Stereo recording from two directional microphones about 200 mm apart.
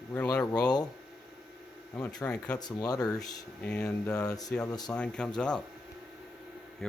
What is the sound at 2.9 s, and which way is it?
Speech, 20° left (ahead or behind).